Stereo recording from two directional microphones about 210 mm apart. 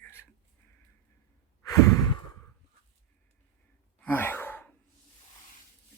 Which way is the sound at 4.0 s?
10° left (ahead or behind).